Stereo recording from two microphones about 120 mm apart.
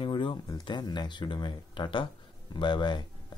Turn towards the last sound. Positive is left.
turn(degrees=40)  # may be behind; listen again after turning